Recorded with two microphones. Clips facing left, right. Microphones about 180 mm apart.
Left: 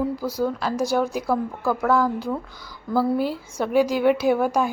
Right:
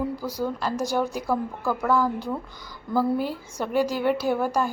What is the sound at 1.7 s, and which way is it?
Speech, 10° right (ahead or behind).